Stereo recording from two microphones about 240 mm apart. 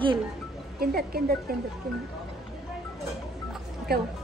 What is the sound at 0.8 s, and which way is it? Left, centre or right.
Speech, right.